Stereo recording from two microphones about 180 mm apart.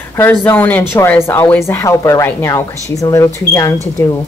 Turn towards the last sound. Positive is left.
turn(degrees=15)  # may be behind; listen again after turning